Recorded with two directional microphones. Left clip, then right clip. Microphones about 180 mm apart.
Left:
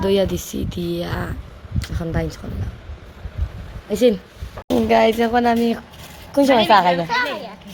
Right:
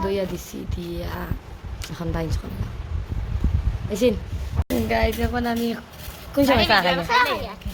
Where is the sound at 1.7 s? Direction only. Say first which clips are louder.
Left 4 dB; 20° left (ahead or behind).